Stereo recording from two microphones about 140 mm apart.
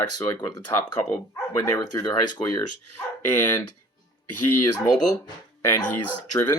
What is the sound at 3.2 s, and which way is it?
Speech, 20° left (ahead or behind).